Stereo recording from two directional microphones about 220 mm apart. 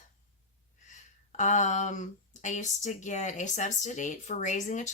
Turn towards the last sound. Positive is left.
turn(degrees=35)  # may be behind; listen again after turning